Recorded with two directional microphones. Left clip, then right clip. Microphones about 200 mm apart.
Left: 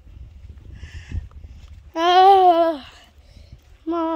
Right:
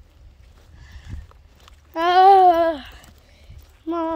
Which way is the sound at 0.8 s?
30° left (ahead or behind).